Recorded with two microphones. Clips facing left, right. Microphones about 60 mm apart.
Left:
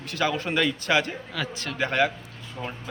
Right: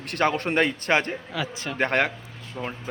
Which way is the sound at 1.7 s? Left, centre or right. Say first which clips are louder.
Right 1 dB; right.